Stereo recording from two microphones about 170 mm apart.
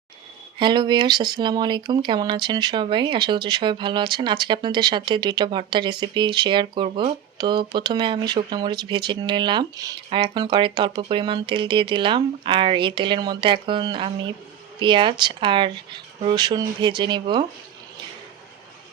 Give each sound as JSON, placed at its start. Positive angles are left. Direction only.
{"t": 0.6, "sound": "speech", "side_deg": -25}